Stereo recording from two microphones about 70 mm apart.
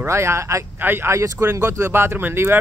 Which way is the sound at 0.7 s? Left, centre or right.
Right.